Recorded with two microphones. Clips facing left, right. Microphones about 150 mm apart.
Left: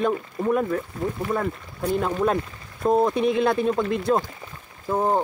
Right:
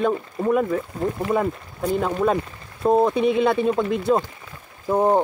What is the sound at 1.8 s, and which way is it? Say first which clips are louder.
Speech: right 2 dB; centre (ahead or behind).